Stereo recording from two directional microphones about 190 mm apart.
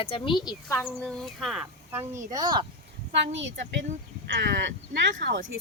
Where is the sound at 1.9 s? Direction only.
15° right (ahead or behind).